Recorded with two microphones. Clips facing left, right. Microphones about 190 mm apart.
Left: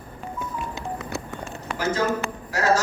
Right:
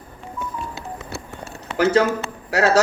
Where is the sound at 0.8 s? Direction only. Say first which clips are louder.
Left 2 dB; 15° left (ahead or behind).